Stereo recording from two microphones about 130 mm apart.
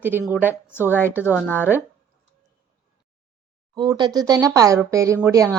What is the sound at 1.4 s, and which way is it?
Speech, 15° left (ahead or behind).